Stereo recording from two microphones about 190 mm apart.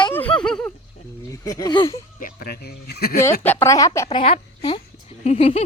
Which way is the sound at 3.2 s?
10° left (ahead or behind).